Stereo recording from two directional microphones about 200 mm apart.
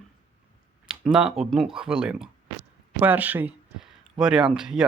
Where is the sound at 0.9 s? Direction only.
5° right (ahead or behind).